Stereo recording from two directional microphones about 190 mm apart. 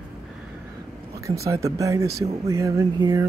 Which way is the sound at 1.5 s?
15° right (ahead or behind).